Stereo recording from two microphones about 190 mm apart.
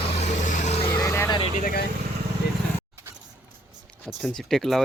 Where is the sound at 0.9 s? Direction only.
20° left (ahead or behind).